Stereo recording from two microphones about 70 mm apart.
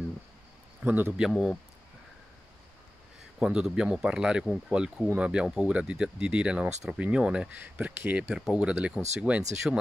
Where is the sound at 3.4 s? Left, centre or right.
Centre.